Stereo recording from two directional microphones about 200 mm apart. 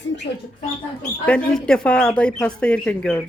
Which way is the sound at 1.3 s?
5° left (ahead or behind).